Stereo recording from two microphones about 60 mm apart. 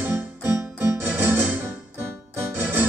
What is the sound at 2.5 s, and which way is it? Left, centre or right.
Keyboard, right.